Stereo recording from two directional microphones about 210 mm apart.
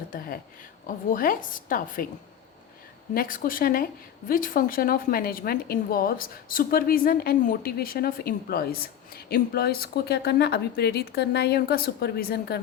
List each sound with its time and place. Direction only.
0.9 s a woman's voice: 40° left (ahead or behind)
3.2 s a woman's voice: 40° left (ahead or behind)